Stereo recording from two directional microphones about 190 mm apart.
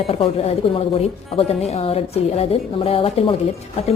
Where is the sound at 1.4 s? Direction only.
35° left (ahead or behind).